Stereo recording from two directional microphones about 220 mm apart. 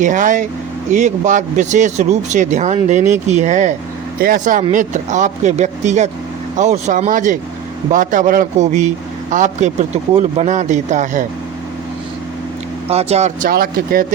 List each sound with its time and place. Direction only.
0.0 s speech: 35° right (ahead or behind)
12.9 s speech: 30° right (ahead or behind)